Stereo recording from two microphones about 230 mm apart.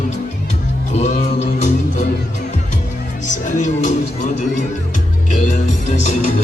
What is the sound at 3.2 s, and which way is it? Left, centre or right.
Music, left.